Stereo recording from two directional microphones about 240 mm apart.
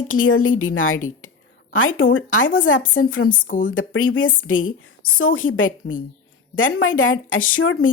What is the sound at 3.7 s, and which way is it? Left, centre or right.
Speech, left.